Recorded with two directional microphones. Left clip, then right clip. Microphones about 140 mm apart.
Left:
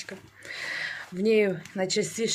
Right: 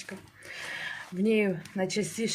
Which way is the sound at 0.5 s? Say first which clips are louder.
Left 4 dB; 20° left (ahead or behind).